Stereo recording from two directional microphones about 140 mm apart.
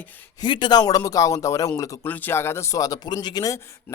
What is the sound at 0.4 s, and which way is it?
A man's voice, 35° left (ahead or behind).